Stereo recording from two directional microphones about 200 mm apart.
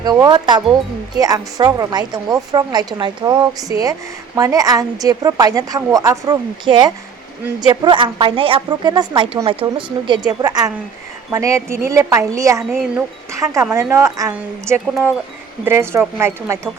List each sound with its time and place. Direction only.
0.0 s a woman's voice: 20° right (ahead or behind)